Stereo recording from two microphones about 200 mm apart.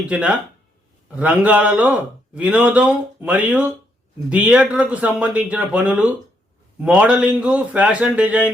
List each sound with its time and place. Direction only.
0.0 s speech: 5° right (ahead or behind)